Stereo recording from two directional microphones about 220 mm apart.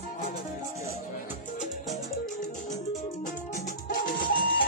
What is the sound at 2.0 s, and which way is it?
Music, 35° left (ahead or behind).